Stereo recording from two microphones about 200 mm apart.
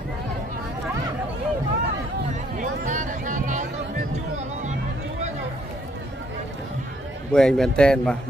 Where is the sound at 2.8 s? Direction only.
40° right (ahead or behind).